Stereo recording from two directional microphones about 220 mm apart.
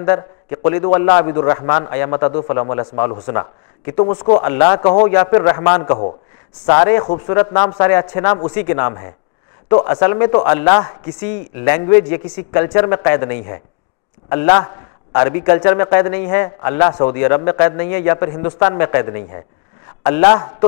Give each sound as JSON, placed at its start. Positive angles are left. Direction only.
{"t": 0.6, "sound": "a man's voice", "side_deg": 25}
{"t": 2.2, "sound": "a man's voice", "side_deg": 30}
{"t": 2.5, "sound": "a man's voice", "side_deg": 20}
{"t": 4.9, "sound": "a man's voice", "side_deg": 30}
{"t": 7.7, "sound": "a man's voice", "side_deg": 20}